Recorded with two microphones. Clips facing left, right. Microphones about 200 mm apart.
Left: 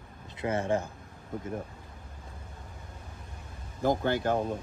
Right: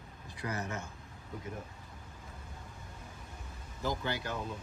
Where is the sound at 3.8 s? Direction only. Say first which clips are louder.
Left 9 dB; 50° left (ahead or behind).